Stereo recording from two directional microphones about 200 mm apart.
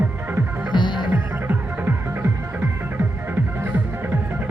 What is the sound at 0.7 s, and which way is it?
Music, 25° left (ahead or behind).